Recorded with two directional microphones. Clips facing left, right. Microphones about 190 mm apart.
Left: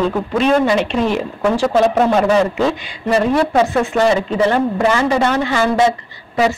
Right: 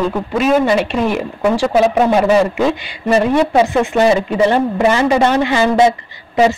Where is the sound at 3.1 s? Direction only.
15° right (ahead or behind).